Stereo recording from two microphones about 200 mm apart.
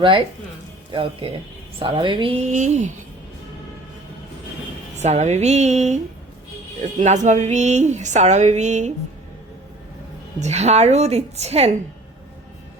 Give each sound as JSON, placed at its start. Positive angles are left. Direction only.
{"t": 0.9, "sound": "speech", "side_deg": -25}
{"t": 2.5, "sound": "a woman's voice", "side_deg": -35}
{"t": 4.9, "sound": "a woman's voice", "side_deg": -35}
{"t": 7.0, "sound": "a woman's voice", "side_deg": -35}
{"t": 10.4, "sound": "a woman's voice", "side_deg": -35}